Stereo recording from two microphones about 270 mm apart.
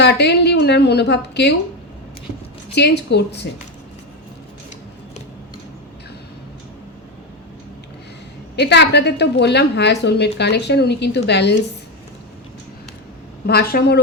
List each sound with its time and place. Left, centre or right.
0.0 s a woman's voice: left
2.7 s a woman's voice: left
8.5 s a woman's voice: left
13.5 s a woman's voice: left